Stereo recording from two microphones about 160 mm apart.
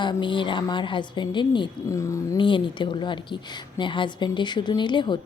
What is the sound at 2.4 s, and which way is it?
Speech, 30° left (ahead or behind).